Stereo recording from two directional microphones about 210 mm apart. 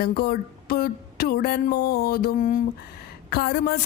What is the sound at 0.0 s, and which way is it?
Speech, 45° left (ahead or behind).